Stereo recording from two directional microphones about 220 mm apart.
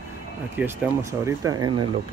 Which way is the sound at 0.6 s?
5° right (ahead or behind).